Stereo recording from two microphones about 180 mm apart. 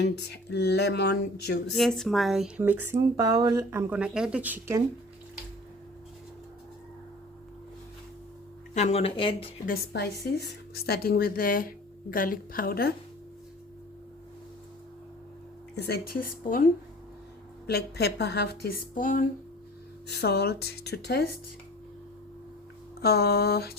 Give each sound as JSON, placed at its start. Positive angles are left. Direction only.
{"t": 0.0, "sound": "speech", "side_deg": 70}
{"t": 1.7, "sound": "speech", "side_deg": 0}
{"t": 8.7, "sound": "speech", "side_deg": 40}
{"t": 9.6, "sound": "a woman's voice", "side_deg": 65}
{"t": 15.7, "sound": "a woman's voice", "side_deg": 65}
{"t": 17.7, "sound": "a woman's voice", "side_deg": 65}
{"t": 20.1, "sound": "a woman's voice", "side_deg": 65}
{"t": 23.0, "sound": "a woman's voice", "side_deg": 60}